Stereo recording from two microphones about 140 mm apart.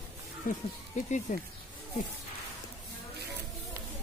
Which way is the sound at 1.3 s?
60° left (ahead or behind).